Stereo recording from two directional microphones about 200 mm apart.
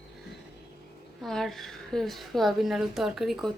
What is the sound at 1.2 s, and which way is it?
A woman's voice, centre (ahead or behind).